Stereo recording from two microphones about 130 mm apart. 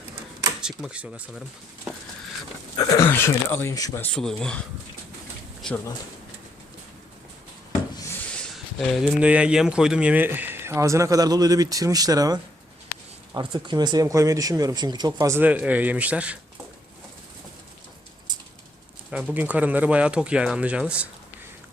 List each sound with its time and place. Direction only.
0.6 s speech: 5° right (ahead or behind)
2.7 s speech: 25° left (ahead or behind)
4.0 s speech: 5° left (ahead or behind)
8.5 s speech: centre (ahead or behind); by 15.4 s 30° right (ahead or behind)
15.4 s speech: 10° right (ahead or behind)
18.3 s a sound: 30° right (ahead or behind)
19.1 s speech: 10° right (ahead or behind)